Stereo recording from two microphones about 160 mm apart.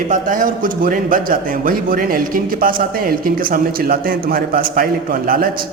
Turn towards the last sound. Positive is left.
turn(degrees=-65)  # may be behind; listen again after turning